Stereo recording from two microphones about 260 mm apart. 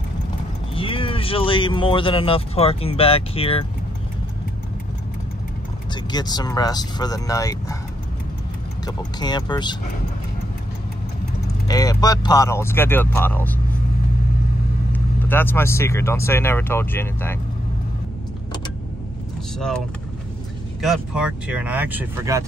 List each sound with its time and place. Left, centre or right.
0.7 s speech: left
6.1 s speech: centre
8.8 s speech: centre
11.6 s speech: centre
14.9 s speech: centre
20.8 s speech: centre